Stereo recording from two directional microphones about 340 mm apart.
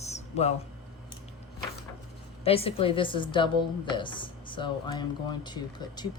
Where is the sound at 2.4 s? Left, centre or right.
Centre.